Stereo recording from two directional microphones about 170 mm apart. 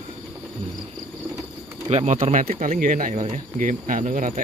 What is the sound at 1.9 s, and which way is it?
Speech, 40° right (ahead or behind).